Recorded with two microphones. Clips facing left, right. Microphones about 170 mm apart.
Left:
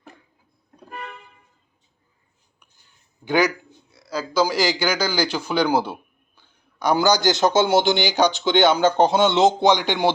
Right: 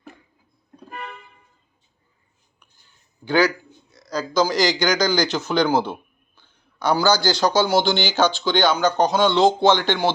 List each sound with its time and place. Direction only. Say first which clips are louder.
3.2 s speech: right 1 dB; 20° left (ahead or behind)
3.9 s speech: right 1 dB; 5° left (ahead or behind)